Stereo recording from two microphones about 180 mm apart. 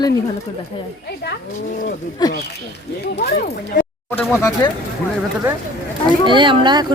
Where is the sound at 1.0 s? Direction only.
65° left (ahead or behind).